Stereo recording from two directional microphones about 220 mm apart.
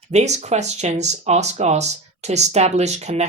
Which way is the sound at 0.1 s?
30° right (ahead or behind).